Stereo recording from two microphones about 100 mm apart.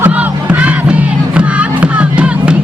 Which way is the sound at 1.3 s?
10° right (ahead or behind).